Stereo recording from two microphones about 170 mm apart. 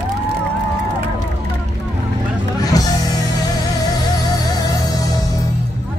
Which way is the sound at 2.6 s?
20° left (ahead or behind).